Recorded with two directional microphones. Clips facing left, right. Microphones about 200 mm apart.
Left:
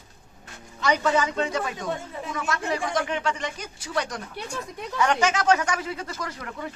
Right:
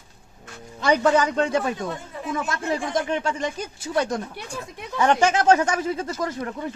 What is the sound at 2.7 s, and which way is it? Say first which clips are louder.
Speech: right 3 dB; 40° right (ahead or behind).